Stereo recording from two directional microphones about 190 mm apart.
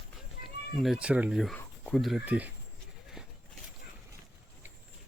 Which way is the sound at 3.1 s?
Centre (ahead or behind).